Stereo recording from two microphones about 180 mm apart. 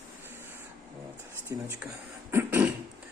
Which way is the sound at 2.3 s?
10° right (ahead or behind).